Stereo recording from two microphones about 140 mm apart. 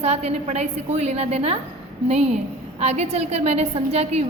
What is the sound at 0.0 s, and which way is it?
A woman's voice, 50° right (ahead or behind).